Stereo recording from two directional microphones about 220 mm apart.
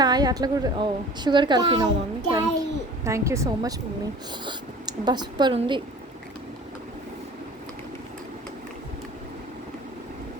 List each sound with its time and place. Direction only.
0.0 s a woman's voice: 20° right (ahead or behind)